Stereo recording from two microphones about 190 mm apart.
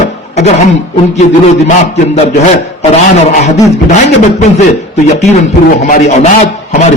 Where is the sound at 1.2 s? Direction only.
35° left (ahead or behind).